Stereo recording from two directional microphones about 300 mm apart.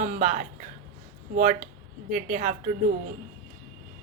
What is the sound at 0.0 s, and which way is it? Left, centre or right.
Speech, right.